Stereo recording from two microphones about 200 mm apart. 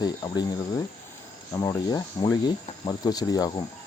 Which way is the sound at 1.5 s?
15° left (ahead or behind).